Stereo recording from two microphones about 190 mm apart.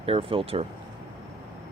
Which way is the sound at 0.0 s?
30° right (ahead or behind).